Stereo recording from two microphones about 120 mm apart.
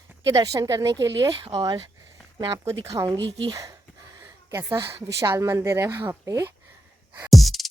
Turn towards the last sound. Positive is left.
turn(degrees=0)  # may be behind; listen again after turning